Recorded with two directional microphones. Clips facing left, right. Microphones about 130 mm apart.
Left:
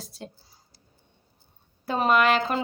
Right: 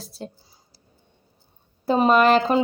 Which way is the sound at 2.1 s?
35° right (ahead or behind).